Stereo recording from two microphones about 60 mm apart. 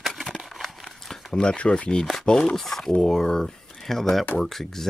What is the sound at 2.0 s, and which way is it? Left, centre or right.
Speech, centre.